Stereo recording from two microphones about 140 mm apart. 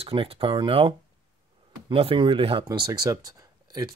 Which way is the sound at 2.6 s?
30° right (ahead or behind).